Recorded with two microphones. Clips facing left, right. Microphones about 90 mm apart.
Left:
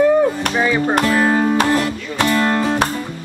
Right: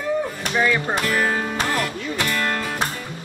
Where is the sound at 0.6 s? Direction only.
20° left (ahead or behind).